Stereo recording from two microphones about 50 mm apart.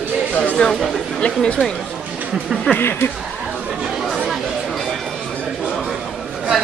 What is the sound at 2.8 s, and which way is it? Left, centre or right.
Speech, left.